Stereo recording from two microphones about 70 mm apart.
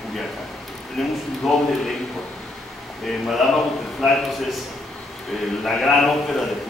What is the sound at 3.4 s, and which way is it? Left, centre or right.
Speech, centre.